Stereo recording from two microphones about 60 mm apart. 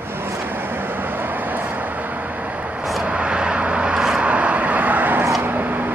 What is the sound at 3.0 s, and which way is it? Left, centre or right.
Vehicle, centre.